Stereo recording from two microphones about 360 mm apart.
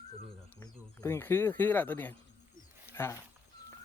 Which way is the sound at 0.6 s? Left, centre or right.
Centre.